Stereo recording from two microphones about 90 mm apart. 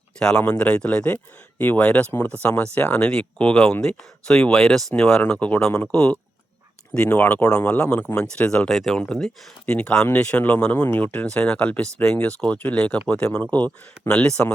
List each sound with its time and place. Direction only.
0.2 s speech: 10° left (ahead or behind)